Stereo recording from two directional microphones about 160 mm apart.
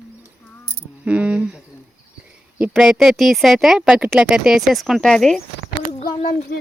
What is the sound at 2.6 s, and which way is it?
Speech, 5° right (ahead or behind).